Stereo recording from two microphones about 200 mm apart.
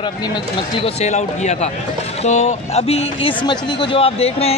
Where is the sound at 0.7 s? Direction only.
30° left (ahead or behind).